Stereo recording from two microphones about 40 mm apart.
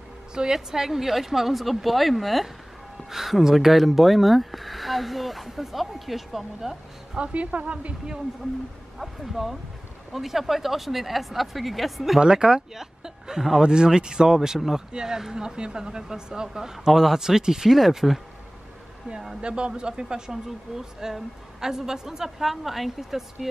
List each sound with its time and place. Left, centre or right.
0.3 s speech: centre
7.2 s a woman's voice: right
9.0 s speech: centre
12.2 s speech: centre
19.4 s speech: right
20.4 s speech: centre